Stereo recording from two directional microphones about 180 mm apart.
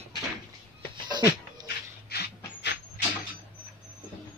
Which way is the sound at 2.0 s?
60° left (ahead or behind).